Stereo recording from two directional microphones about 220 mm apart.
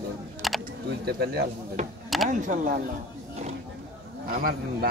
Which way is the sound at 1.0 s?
45° right (ahead or behind).